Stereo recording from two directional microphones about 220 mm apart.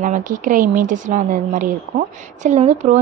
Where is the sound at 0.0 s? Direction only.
35° right (ahead or behind).